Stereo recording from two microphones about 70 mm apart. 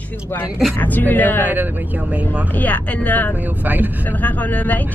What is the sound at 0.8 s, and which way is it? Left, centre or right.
Speech, left.